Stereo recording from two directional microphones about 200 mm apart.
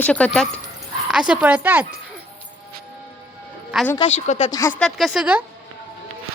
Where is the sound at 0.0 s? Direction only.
5° left (ahead or behind).